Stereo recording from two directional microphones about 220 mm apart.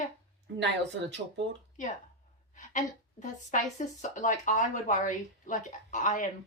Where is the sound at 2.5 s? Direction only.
35° left (ahead or behind).